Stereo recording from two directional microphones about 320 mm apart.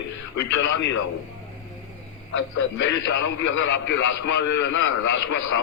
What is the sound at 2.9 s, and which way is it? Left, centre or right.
A man's voice, left.